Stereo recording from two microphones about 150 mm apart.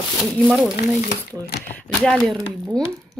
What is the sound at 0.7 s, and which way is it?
Speech, 90° left.